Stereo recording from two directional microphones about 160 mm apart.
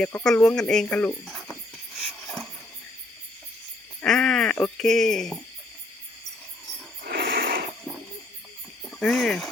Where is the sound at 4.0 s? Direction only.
5° left (ahead or behind).